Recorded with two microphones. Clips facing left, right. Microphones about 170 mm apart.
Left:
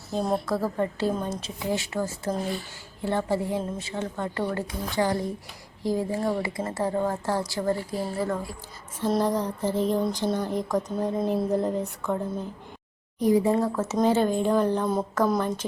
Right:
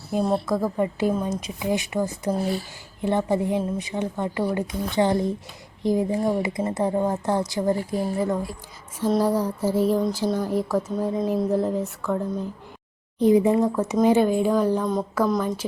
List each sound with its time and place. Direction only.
0.1 s a woman's voice: 10° right (ahead or behind)
9.0 s a woman's voice: 5° right (ahead or behind)
13.1 s a woman's voice: 20° right (ahead or behind); by 15.6 s 5° right (ahead or behind)